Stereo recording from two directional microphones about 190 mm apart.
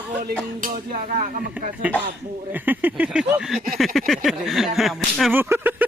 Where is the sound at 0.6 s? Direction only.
40° right (ahead or behind).